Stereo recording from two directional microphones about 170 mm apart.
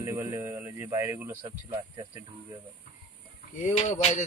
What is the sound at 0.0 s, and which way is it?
Speech, 15° right (ahead or behind).